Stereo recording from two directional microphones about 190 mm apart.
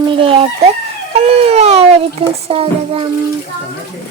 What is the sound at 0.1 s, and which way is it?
A child's voice, 30° right (ahead or behind).